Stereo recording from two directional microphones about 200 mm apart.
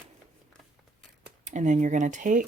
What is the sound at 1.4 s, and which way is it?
Speech, 35° right (ahead or behind).